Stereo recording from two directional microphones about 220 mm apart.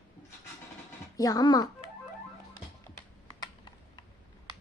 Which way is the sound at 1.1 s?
15° left (ahead or behind).